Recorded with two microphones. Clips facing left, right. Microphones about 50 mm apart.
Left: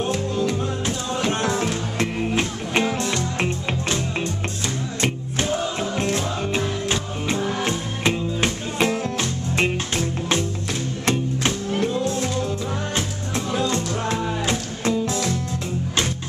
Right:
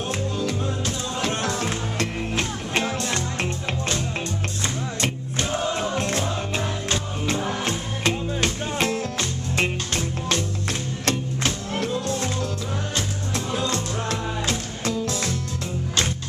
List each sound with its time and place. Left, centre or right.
0.4 s music: centre
6.1 s music: centre
11.1 s music: centre
13.5 s music: centre